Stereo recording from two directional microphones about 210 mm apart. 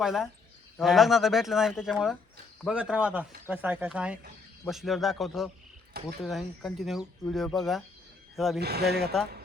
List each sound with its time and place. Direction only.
0.0 s speech: centre (ahead or behind)
8.5 s speech: 50° right (ahead or behind)